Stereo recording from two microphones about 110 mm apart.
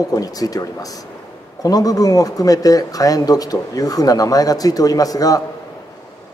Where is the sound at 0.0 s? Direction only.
35° left (ahead or behind).